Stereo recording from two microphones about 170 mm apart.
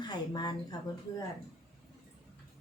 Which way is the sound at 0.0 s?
25° left (ahead or behind).